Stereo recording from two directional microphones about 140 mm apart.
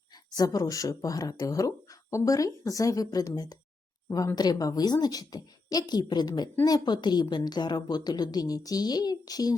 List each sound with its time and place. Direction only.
0.3 s speech: 25° left (ahead or behind)